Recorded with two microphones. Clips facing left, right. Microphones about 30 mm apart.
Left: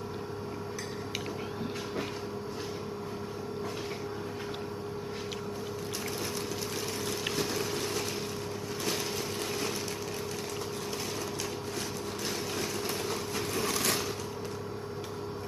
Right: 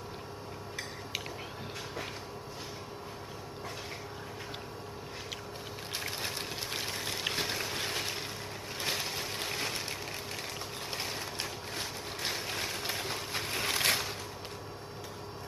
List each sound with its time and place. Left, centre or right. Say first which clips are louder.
6.0 s a sound: left 1 dB; right
7.3 s boat: left 2 dB; right
7.6 s ratchet: left 2 dB; right
9.1 s vehicle: left 2 dB; right
12.2 s vehicle: even; right
12.9 s wood: left 3 dB; right
13.5 s a sound: right 1 dB; right